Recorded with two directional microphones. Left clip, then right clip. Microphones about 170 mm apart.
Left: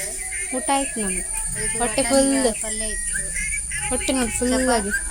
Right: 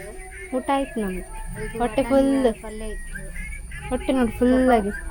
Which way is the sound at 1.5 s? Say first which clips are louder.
Even; 10° left (ahead or behind).